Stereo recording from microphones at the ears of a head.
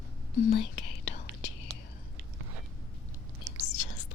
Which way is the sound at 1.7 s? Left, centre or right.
Right.